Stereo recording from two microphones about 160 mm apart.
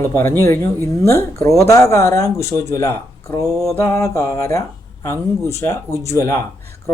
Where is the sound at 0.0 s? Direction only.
15° left (ahead or behind).